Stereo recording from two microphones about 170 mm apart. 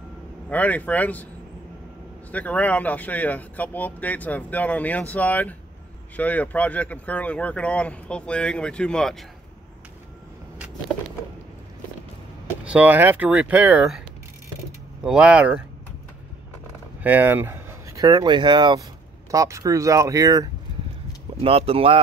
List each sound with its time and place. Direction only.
0.5 s speech: 10° left (ahead or behind)
2.3 s speech: 10° left (ahead or behind)
12.6 s speech: 10° right (ahead or behind)
15.0 s speech: 5° right (ahead or behind)
17.0 s speech: 10° right (ahead or behind)
21.4 s speech: 35° right (ahead or behind)